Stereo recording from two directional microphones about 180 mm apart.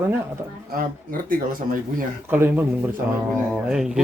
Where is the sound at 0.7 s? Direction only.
50° right (ahead or behind).